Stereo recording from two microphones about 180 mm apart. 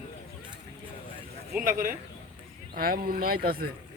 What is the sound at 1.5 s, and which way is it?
Speech, 50° right (ahead or behind).